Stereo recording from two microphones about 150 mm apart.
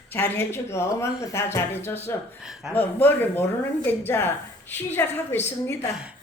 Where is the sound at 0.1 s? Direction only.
15° left (ahead or behind).